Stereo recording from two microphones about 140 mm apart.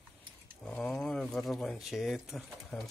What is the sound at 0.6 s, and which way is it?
Speech, 10° left (ahead or behind).